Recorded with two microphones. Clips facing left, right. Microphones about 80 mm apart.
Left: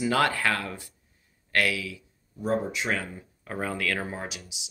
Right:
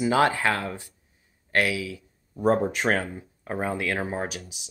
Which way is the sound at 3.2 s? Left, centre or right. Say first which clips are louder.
Right 3 dB; right.